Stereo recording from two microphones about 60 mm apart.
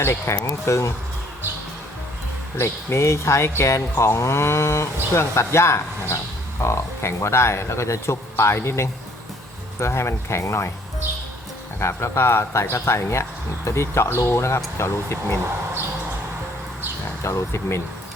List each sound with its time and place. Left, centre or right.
0.0 s speech: left
0.4 s speech: left
2.6 s speech: left
11.8 s speech: left
17.2 s speech: left